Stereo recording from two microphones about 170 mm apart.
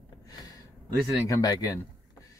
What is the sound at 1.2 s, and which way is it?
Speech, 20° left (ahead or behind).